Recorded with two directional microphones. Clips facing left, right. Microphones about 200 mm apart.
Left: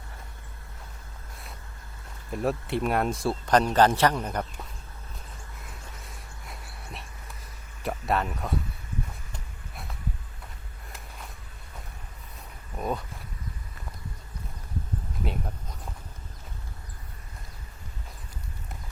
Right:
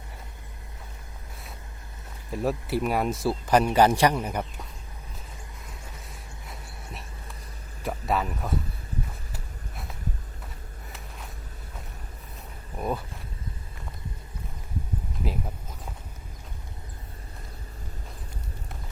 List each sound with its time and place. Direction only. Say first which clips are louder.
2.3 s a man's voice: right 1 dB; centre (ahead or behind)
6.1 s a sound: right 1 dB; centre (ahead or behind)
7.8 s speech: even; centre (ahead or behind)
9.3 s a sound: right 2 dB; centre (ahead or behind)
12.7 s speech: right 1 dB; 5° right (ahead or behind)
15.2 s a man's voice: right 1 dB; centre (ahead or behind)